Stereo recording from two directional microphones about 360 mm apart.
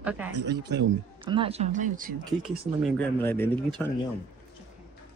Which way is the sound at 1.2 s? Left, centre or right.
Centre.